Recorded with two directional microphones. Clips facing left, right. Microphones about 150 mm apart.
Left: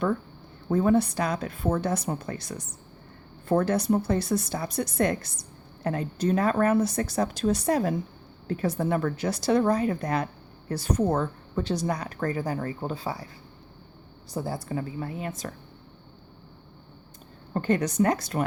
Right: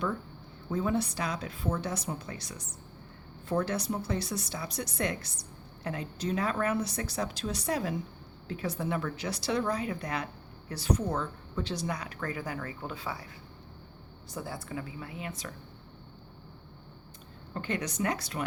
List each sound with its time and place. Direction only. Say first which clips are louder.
0.7 s speech: left 8 dB; 55° left (ahead or behind); by 13.2 s 35° left (ahead or behind)
14.3 s speech: left 7 dB; 35° left (ahead or behind)
17.5 s speech: left 9 dB; 45° left (ahead or behind)